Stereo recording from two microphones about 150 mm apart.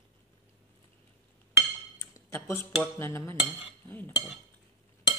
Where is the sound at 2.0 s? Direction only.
15° left (ahead or behind).